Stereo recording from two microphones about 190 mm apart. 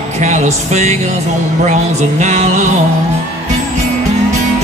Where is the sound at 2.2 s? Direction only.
35° right (ahead or behind).